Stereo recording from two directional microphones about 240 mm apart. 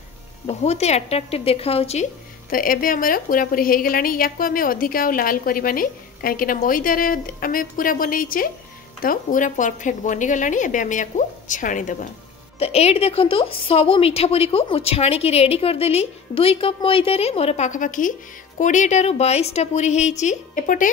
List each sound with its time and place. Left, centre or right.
0.5 s a woman's voice: left
2.5 s a woman's voice: left